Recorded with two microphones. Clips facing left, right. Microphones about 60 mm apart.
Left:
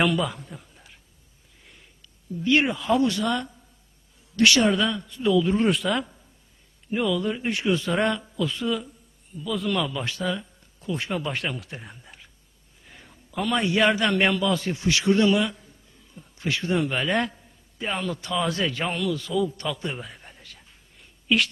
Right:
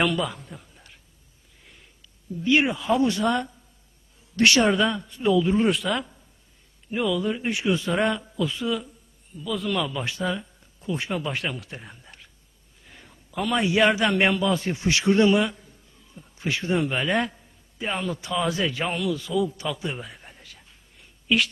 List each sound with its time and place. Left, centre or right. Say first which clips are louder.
0.0 s a sound: left 1 dB; centre
2.4 s speech: even; centre
2.9 s a woman's voice: right 1 dB; right
5.4 s speech: even; centre
10.0 s a man's voice: even; centre
16.9 s a man's voice: even; centre